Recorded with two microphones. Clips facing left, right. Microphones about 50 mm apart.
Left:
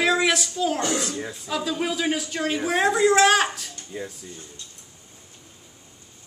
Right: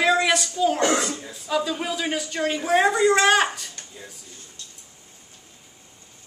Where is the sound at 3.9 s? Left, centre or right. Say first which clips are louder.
Left 12 dB; left.